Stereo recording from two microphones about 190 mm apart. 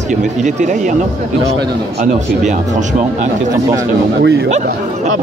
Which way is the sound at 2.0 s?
40° right (ahead or behind).